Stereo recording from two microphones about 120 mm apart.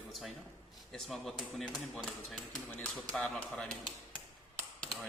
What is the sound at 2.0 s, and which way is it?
Speech, 10° left (ahead or behind).